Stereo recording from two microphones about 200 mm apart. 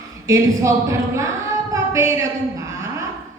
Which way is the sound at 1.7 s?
15° right (ahead or behind).